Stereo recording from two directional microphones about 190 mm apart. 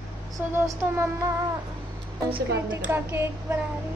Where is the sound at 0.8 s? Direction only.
10° right (ahead or behind).